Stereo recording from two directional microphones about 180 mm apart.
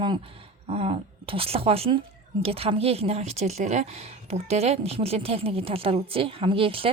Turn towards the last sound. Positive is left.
turn(degrees=-30)  # may be behind; listen again after turning